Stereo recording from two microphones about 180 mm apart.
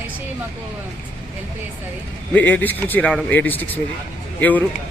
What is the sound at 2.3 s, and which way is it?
Speech, 10° left (ahead or behind).